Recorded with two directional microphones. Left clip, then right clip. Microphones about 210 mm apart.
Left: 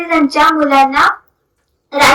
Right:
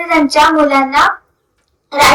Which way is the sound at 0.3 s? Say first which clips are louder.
Right 1 dB; 55° right (ahead or behind).